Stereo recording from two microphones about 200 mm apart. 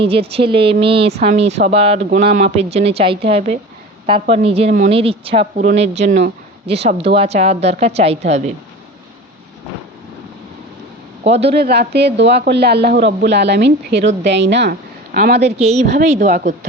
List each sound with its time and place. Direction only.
0.0 s a woman's voice: 30° right (ahead or behind)
11.2 s a man's voice: 30° right (ahead or behind)
11.5 s speech: 55° right (ahead or behind)
15.4 s a woman's voice: 30° right (ahead or behind)